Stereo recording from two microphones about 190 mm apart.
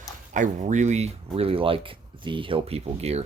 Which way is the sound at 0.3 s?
40° right (ahead or behind).